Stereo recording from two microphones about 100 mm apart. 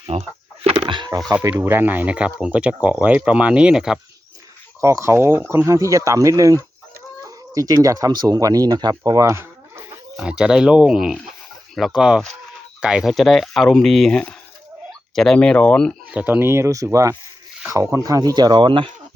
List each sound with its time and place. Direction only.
0.1 s chicken: 85° right; by 1.1 s 55° right (ahead or behind)
1.5 s speech: 25° right (ahead or behind); by 4.0 s 5° right (ahead or behind)
4.8 s speech: 30° right (ahead or behind)
10.2 s speech: 10° right (ahead or behind); by 16.0 s 10° left (ahead or behind)
16.1 s speech: 15° right (ahead or behind); by 18.9 s 55° right (ahead or behind)